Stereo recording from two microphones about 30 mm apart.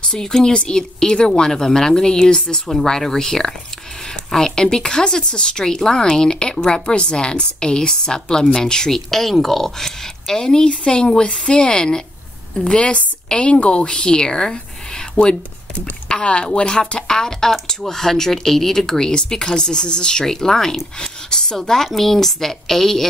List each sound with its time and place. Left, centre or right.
0.2 s speech: centre
0.5 s speech: left
8.9 s a woman's voice: centre; by 13.8 s left
13.8 s speech: left
15.1 s speech: left
15.8 s a woman's voice: left
17.1 s speech: centre
20.2 s speech: centre
21.5 s speech: centre